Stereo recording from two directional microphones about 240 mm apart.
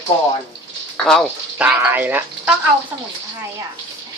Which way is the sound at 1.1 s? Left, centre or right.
Centre.